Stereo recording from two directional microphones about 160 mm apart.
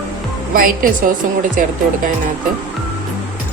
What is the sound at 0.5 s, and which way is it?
A woman's voice, 60° right (ahead or behind).